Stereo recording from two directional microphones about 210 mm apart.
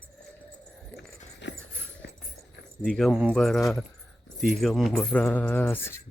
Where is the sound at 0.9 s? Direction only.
55° left (ahead or behind).